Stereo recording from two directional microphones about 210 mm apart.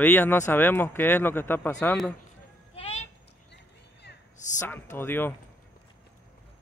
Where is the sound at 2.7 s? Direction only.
30° left (ahead or behind).